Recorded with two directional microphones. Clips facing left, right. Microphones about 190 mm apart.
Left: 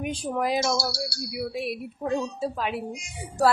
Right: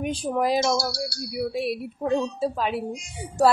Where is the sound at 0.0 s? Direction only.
30° right (ahead or behind).